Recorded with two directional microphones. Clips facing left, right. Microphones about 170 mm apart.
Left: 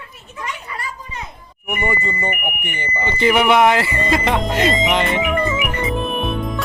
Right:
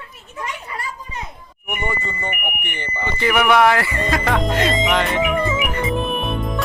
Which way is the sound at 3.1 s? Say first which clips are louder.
Left 2 dB; 25° left (ahead or behind).